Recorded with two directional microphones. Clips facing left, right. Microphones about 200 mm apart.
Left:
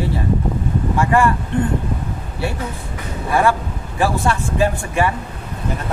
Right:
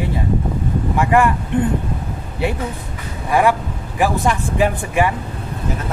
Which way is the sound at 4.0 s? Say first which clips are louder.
Right 1 dB; 15° right (ahead or behind).